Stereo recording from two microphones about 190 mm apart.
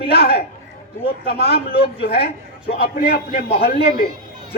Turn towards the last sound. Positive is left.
turn(degrees=55)  # may be behind; listen again after turning